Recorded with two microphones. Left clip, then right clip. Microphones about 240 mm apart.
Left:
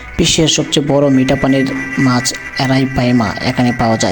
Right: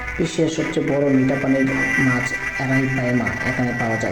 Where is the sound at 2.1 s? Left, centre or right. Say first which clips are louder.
Left 4 dB; left.